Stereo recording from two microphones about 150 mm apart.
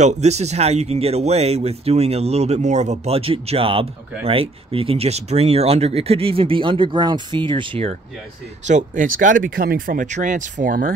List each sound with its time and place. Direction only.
0.0 s speech: 50° right (ahead or behind)
8.6 s speech: 55° right (ahead or behind)